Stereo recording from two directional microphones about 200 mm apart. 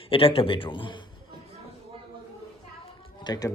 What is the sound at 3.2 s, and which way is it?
Speech, 20° left (ahead or behind).